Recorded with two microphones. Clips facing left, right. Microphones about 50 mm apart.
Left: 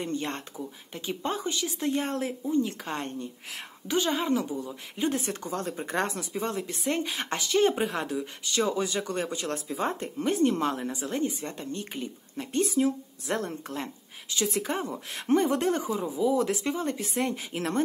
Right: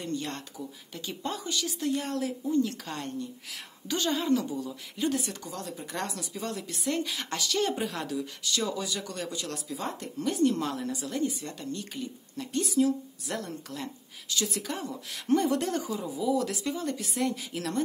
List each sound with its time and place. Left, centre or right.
0.0 s a woman's voice: left
2.4 s a woman's voice: left
3.8 s a woman's voice: left